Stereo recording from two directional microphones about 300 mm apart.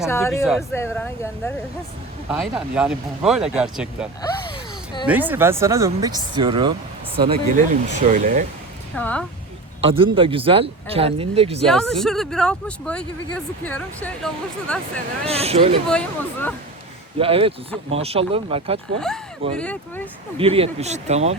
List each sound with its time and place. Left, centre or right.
0.0 s speech: centre
2.3 s speech: centre; by 8.4 s right
9.0 s speech: centre
9.8 s speech: centre
11.6 s speech: centre
15.3 s speech: centre
15.9 s speech: centre
17.2 s speech: centre
18.9 s speech: centre
20.4 s speech: centre